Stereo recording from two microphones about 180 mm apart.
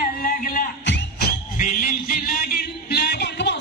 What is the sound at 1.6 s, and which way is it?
Music, 50° left (ahead or behind).